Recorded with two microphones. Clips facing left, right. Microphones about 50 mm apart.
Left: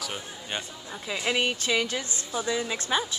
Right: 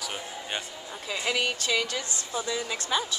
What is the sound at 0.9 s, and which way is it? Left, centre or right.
Speech, centre.